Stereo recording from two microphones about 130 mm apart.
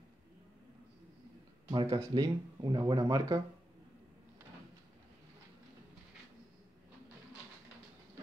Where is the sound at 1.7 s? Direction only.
40° right (ahead or behind).